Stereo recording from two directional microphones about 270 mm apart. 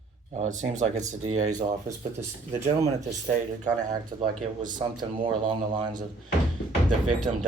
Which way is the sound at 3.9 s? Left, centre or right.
Centre.